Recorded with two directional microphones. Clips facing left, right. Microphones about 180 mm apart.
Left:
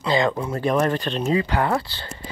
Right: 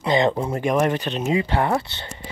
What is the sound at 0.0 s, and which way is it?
Speech, 20° right (ahead or behind).